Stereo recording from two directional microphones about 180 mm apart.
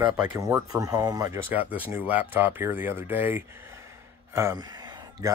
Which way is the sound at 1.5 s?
10° right (ahead or behind).